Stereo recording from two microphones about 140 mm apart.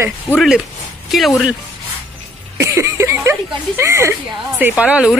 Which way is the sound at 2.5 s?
20° right (ahead or behind).